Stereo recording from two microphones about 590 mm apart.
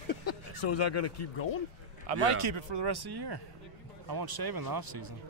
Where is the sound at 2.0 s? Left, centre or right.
Right.